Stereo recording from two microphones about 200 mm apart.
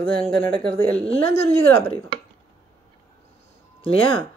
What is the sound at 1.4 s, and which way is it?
Speech, 30° left (ahead or behind).